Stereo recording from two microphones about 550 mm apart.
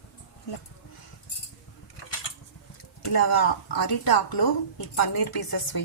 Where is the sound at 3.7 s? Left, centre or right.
Left.